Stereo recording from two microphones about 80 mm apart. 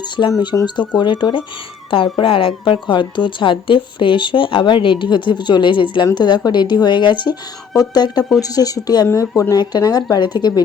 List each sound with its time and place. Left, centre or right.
0.2 s speech: left
0.9 s speech: left
2.1 s speech: left
6.1 s speech: left
7.8 s speech: left